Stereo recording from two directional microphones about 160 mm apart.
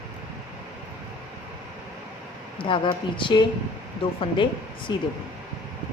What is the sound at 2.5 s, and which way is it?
A woman's voice, 30° left (ahead or behind).